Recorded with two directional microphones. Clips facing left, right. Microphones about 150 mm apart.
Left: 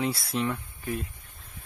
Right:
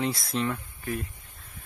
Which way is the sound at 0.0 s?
10° left (ahead or behind).